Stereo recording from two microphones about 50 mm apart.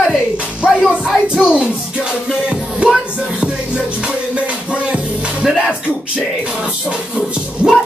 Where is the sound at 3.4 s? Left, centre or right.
Centre.